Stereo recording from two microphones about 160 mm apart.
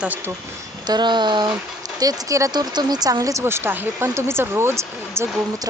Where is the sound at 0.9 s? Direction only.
30° right (ahead or behind).